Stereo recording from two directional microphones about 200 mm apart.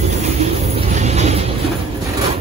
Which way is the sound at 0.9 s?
35° right (ahead or behind).